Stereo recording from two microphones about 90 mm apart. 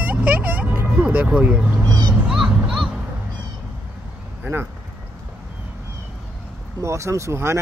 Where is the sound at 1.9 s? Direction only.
50° right (ahead or behind).